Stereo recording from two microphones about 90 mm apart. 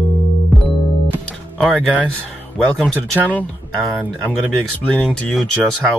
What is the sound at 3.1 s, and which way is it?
Speech, 20° right (ahead or behind).